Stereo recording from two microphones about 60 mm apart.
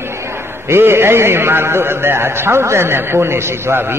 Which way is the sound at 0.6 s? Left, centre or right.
Right.